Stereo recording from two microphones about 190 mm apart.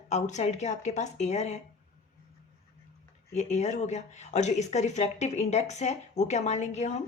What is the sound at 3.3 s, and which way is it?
Speech, 40° left (ahead or behind).